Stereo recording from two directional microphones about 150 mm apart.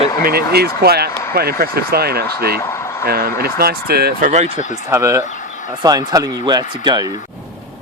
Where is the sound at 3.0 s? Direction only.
90° right; by 4.4 s 65° right (ahead or behind).